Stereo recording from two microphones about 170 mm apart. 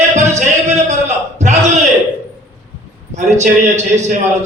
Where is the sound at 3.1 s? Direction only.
45° right (ahead or behind).